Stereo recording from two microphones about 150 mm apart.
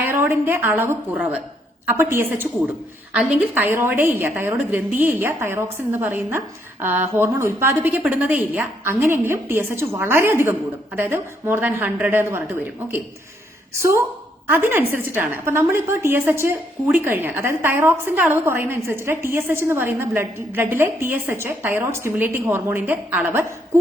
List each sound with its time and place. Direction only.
0.0 s a woman's voice: 15° right (ahead or behind)
13.7 s a woman's voice: 20° right (ahead or behind)